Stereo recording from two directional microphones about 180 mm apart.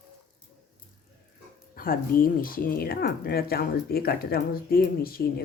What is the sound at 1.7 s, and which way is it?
Speech, 55° left (ahead or behind).